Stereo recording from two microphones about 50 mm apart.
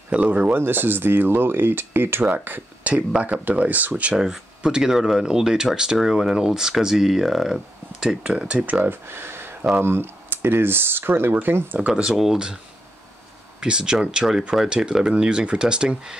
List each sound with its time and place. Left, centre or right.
0.1 s speech: right
0.6 s speech: right
2.8 s speech: right
4.2 s speech: centre
8.8 s speech: right
11.8 s speech: centre
13.6 s speech: centre